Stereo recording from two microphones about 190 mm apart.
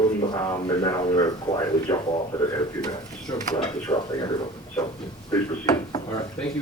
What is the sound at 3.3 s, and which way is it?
Speech, 20° left (ahead or behind).